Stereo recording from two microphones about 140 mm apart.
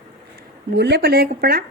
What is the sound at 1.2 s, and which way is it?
Speech, 90° right.